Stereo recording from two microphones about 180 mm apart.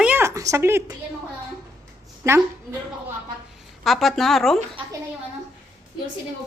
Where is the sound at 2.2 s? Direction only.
15° right (ahead or behind).